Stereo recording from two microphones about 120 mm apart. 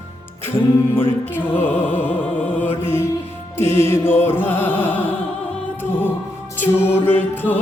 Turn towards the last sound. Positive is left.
turn(degrees=15)  # may be behind; listen again after turning